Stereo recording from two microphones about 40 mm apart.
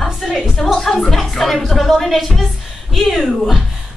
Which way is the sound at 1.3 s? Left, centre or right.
Centre.